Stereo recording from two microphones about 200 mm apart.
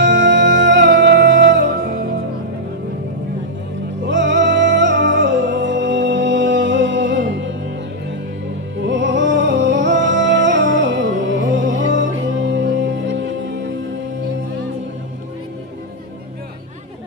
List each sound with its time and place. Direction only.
0.0 s music: 65° right (ahead or behind)
4.0 s music: 65° right (ahead or behind)
8.7 s music: 65° right (ahead or behind)